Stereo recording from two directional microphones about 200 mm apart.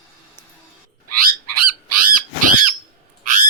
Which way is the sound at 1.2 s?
45° right (ahead or behind).